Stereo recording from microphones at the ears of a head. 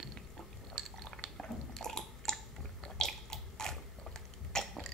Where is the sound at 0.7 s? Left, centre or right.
Right.